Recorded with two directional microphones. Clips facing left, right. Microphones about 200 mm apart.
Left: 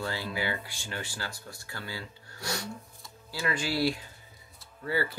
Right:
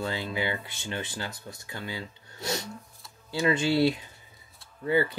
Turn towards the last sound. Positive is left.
turn(degrees=-20)  # may be behind; listen again after turning